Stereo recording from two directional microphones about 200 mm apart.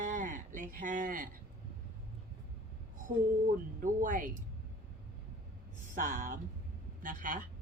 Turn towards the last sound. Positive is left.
turn(degrees=-40)  # may be behind; listen again after turning